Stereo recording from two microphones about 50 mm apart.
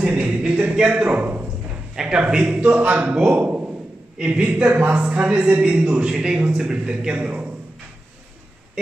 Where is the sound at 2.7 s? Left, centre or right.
Right.